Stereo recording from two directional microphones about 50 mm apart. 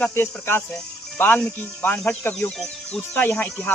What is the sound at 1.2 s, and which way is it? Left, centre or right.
Speech, left.